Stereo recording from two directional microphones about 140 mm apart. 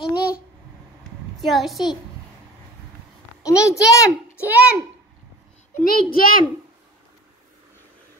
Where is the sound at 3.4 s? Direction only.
20° left (ahead or behind).